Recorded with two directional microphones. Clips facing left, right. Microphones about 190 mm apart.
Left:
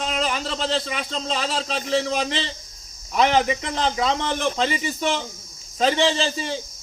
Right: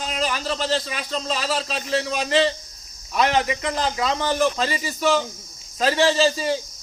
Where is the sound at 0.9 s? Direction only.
25° left (ahead or behind).